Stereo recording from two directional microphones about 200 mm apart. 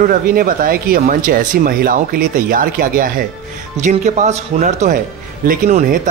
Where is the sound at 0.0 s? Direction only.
45° right (ahead or behind).